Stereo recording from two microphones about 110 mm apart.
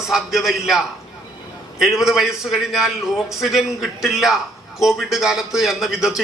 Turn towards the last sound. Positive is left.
turn(degrees=-5)  # may be behind; listen again after turning